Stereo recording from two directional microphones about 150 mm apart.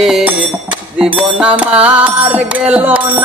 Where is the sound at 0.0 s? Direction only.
5° right (ahead or behind).